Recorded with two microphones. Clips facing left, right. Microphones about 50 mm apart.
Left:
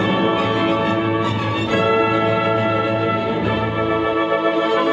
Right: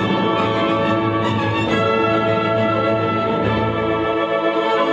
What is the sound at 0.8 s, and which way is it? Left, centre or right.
Music, centre.